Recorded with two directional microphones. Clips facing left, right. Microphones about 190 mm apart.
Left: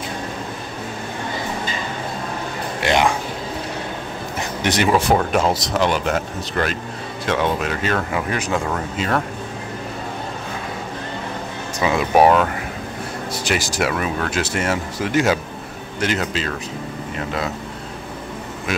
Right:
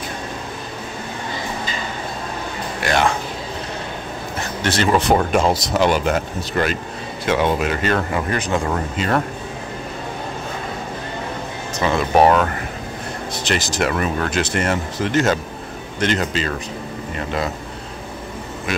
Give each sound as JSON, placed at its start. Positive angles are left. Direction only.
{"t": 2.8, "sound": "speech", "side_deg": 15}
{"t": 4.6, "sound": "speech", "side_deg": 10}
{"t": 11.8, "sound": "speech", "side_deg": 10}